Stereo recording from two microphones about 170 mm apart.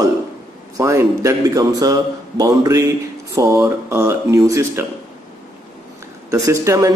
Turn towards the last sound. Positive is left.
turn(degrees=-20)  # may be behind; listen again after turning